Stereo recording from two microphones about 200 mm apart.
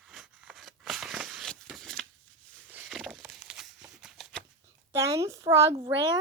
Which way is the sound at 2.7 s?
10° right (ahead or behind).